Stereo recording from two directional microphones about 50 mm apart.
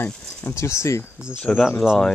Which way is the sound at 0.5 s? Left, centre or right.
Left.